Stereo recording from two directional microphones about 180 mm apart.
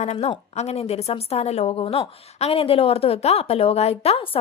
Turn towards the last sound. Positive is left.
turn(degrees=30)  # may be behind; listen again after turning